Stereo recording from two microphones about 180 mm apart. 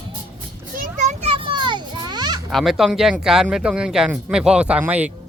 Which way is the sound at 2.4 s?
Centre (ahead or behind).